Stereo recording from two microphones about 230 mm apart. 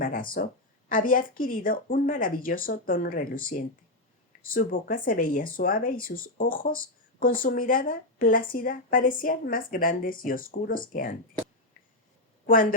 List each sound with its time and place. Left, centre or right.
0.0 s speech: left